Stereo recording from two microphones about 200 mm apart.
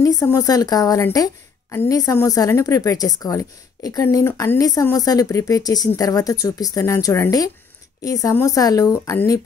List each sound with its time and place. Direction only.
0.0 s a woman's voice: 15° left (ahead or behind)